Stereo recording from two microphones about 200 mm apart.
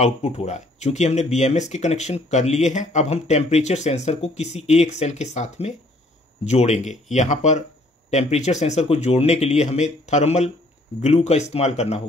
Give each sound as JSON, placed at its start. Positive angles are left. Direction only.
{"t": 0.0, "sound": "speech", "side_deg": 30}